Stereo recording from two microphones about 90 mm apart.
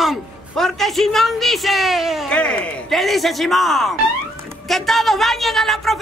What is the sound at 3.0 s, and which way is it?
A woman's voice, centre (ahead or behind).